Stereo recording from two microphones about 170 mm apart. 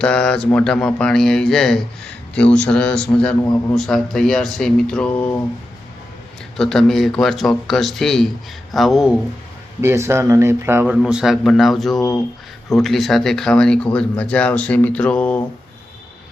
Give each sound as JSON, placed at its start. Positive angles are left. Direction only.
{"t": 0.0, "sound": "speech", "side_deg": 5}
{"t": 6.6, "sound": "speech", "side_deg": 5}
{"t": 9.8, "sound": "speech", "side_deg": -15}
{"t": 10.9, "sound": "speech", "side_deg": -5}